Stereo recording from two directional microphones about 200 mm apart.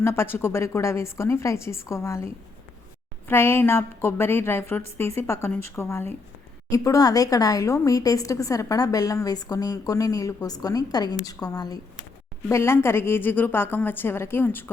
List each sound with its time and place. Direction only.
0.0 s a woman's voice: 10° left (ahead or behind)